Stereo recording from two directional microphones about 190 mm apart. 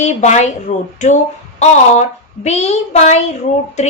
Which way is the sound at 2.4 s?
35° left (ahead or behind).